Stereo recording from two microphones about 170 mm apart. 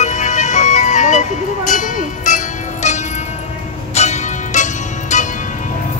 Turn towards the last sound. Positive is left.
turn(degrees=45)  # may be behind; listen again after turning